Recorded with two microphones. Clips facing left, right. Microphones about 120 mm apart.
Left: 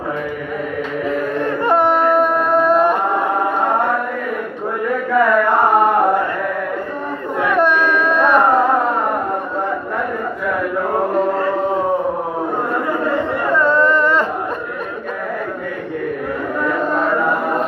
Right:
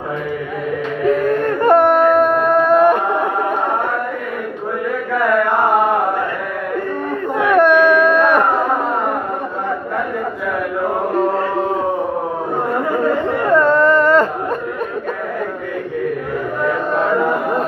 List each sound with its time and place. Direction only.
1.4 s music: 50° right (ahead or behind)
7.4 s a sound: 55° right (ahead or behind)
13.5 s carnatic music: 45° right (ahead or behind)